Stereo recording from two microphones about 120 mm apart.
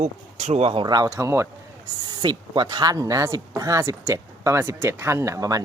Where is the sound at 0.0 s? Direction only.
65° right (ahead or behind).